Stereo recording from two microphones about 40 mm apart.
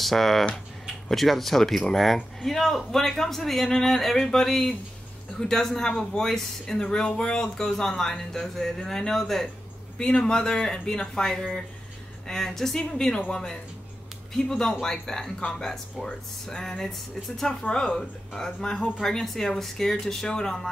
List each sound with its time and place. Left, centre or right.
0.0 s speech: centre
9.9 s speech: centre
12.9 s speech: left
13.3 s speech: centre